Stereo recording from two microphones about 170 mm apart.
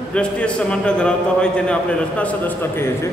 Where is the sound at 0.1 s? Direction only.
5° left (ahead or behind).